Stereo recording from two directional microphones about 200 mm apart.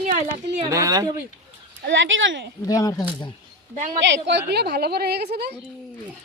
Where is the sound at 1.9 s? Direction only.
70° right (ahead or behind).